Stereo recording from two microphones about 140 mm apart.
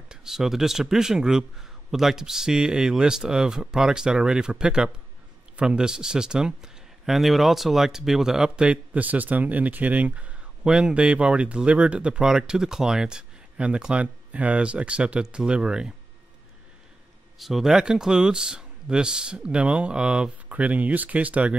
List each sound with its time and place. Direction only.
0.1 s speech: 5° right (ahead or behind)
17.4 s speech: centre (ahead or behind)